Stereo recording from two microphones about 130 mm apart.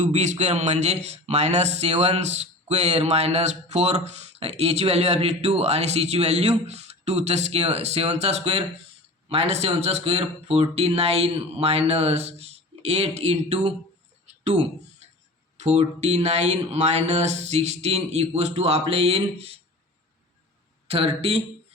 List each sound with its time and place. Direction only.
0.0 s speech: 65° right (ahead or behind)
15.5 s speech: 60° right (ahead or behind)
20.8 s speech: 50° right (ahead or behind)